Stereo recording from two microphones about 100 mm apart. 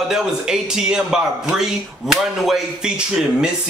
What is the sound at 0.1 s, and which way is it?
Speech, 5° right (ahead or behind).